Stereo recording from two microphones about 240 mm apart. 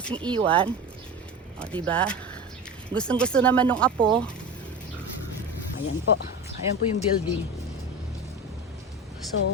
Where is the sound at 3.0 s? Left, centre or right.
Centre.